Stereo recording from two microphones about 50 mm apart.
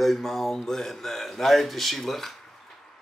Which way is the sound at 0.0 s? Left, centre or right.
Centre.